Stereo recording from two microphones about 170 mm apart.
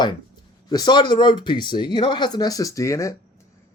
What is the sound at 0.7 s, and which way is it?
Speech, 25° left (ahead or behind).